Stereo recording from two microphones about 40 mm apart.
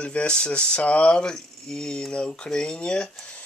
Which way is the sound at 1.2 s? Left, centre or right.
Centre.